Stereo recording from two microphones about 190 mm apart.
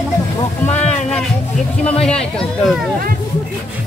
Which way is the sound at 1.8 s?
5° left (ahead or behind).